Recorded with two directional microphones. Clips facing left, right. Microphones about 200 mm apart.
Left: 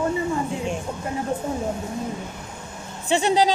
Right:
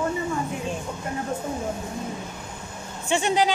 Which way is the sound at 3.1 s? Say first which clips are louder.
Left 3 dB; 35° left (ahead or behind).